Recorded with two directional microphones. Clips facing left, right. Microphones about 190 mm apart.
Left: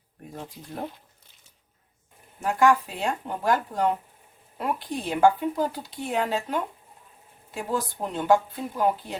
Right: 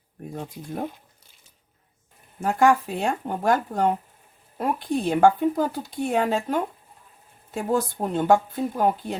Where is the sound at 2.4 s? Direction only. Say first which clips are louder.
Right 2 dB; 45° right (ahead or behind).